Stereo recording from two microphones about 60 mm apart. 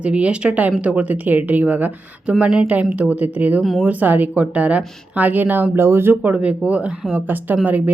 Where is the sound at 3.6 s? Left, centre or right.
Centre.